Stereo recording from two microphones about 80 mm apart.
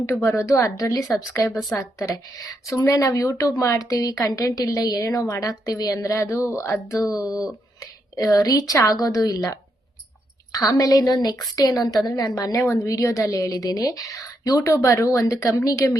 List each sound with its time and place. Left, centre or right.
0.0 s a woman's voice: left
7.1 s a woman's voice: left
12.6 s a woman's voice: left
12.9 s a woman's voice: left